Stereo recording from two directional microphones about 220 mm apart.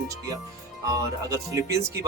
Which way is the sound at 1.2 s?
15° right (ahead or behind).